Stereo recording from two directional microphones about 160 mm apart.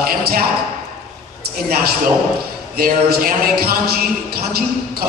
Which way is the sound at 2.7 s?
70° right (ahead or behind).